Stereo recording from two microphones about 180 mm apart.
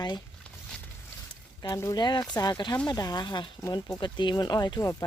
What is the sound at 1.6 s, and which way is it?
Speech, 20° left (ahead or behind).